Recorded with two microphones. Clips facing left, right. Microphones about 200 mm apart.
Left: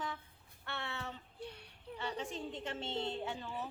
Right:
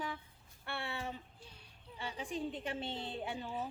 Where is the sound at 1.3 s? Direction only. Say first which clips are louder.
Left 11 dB; 65° left (ahead or behind).